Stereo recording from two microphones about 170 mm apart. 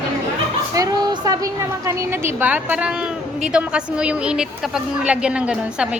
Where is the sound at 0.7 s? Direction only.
20° right (ahead or behind).